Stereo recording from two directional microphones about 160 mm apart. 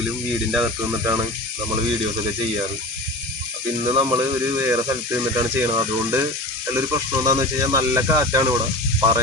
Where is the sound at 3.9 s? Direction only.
25° right (ahead or behind).